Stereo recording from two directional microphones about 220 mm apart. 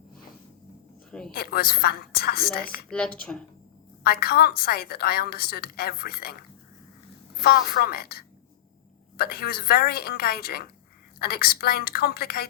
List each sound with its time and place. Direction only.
1.3 s a woman's voice: 45° left (ahead or behind)
2.9 s speech: 5° left (ahead or behind)
4.0 s a woman's voice: 45° left (ahead or behind)
7.4 s a woman's voice: 45° left (ahead or behind)